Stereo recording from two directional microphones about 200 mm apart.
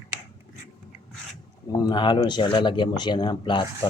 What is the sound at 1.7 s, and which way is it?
Speech, 20° left (ahead or behind).